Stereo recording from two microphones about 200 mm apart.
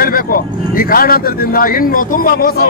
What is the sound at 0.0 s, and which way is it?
Speech, 45° left (ahead or behind).